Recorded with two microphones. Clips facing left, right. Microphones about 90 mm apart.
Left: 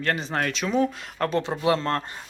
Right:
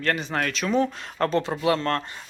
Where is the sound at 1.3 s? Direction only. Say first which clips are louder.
Left 1 dB; 20° left (ahead or behind).